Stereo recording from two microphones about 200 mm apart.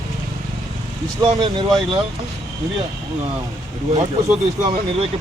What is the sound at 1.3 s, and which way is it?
Speech, 20° right (ahead or behind).